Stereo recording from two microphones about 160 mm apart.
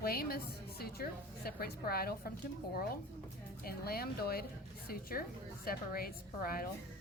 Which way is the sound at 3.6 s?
70° left (ahead or behind).